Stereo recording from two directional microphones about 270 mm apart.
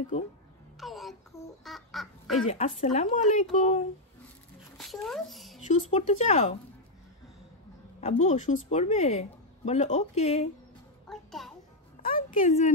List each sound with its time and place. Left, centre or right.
0.1 s speech: left
0.7 s a sound: centre
1.6 s duck: centre
2.8 s speech: left
4.7 s speech: centre
5.7 s speech: left
8.0 s speech: left
11.1 s music: centre
12.0 s music: left